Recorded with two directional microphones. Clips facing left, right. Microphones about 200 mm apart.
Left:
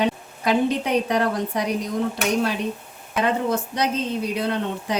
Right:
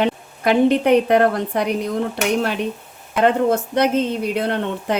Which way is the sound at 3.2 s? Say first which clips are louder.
Right 6 dB; 60° right (ahead or behind).